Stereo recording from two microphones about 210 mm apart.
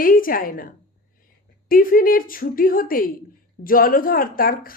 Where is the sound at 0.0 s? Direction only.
40° left (ahead or behind).